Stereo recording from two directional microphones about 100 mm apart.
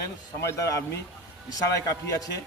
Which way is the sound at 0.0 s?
30° left (ahead or behind).